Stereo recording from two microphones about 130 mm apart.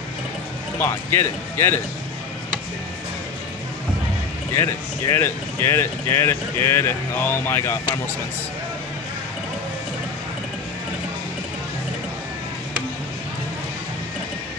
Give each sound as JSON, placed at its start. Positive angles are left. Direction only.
{"t": 0.7, "sound": "speech", "side_deg": 20}
{"t": 4.6, "sound": "speech", "side_deg": 20}